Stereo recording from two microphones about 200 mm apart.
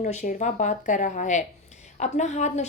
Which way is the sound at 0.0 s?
35° left (ahead or behind).